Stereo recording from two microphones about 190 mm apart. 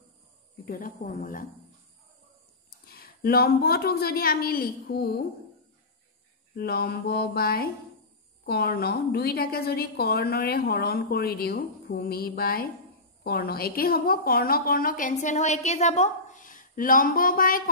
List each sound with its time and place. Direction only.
0.7 s a woman's voice: 45° left (ahead or behind)
2.9 s a woman's voice: 55° left (ahead or behind)
6.5 s a woman's voice: 55° left (ahead or behind)